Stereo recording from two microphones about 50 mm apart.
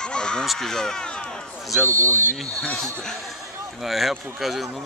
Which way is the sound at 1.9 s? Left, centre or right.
Right.